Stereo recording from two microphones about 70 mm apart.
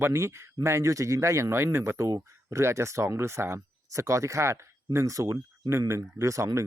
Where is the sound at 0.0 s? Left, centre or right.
Right.